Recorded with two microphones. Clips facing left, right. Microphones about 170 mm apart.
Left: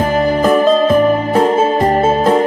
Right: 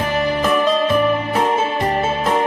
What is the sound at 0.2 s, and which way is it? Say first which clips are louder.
Music: left 5 dB; 40° left (ahead or behind).